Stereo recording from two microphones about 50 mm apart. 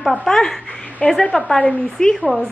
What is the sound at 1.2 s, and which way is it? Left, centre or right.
Speech, left.